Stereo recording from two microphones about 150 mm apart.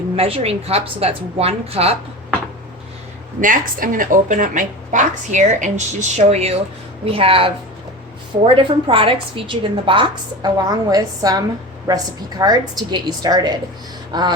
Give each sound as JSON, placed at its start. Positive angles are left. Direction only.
{"t": 0.2, "sound": "a woman's voice", "side_deg": -40}
{"t": 3.4, "sound": "a woman's voice", "side_deg": -65}